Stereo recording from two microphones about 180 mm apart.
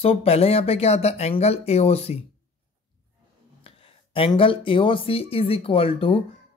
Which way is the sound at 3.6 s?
30° left (ahead or behind).